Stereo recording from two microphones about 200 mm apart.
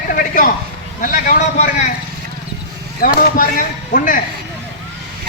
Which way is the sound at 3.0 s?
45° left (ahead or behind).